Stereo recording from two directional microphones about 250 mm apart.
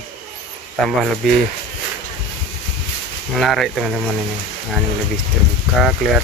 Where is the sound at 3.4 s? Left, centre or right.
Centre.